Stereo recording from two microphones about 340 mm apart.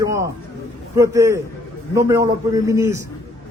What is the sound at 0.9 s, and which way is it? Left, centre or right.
A man's voice, centre.